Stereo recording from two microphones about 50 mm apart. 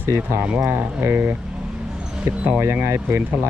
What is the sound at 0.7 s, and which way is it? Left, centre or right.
Speech, right.